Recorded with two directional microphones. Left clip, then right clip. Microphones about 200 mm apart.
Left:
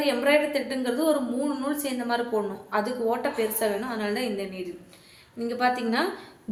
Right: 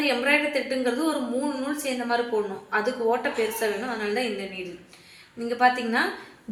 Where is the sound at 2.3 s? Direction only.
20° left (ahead or behind).